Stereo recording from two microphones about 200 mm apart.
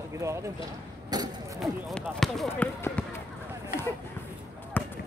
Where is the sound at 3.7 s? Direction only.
45° left (ahead or behind).